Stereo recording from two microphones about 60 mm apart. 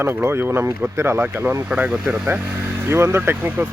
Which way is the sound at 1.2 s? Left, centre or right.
Right.